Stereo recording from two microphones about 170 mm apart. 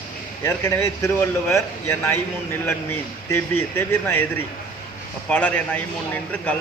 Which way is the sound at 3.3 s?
15° left (ahead or behind).